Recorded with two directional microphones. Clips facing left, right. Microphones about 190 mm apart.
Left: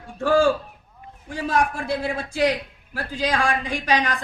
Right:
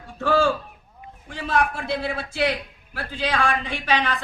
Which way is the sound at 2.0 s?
15° left (ahead or behind).